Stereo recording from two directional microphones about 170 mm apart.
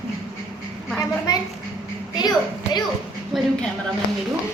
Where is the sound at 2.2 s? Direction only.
25° left (ahead or behind).